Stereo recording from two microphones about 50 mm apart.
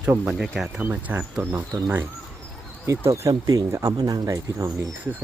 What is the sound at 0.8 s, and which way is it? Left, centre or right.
Speech, right.